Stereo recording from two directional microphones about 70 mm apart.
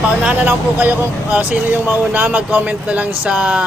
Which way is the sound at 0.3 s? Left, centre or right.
Right.